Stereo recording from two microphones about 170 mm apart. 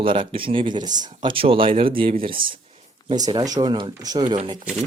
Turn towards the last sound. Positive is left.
turn(degrees=-30)  # may be behind; listen again after turning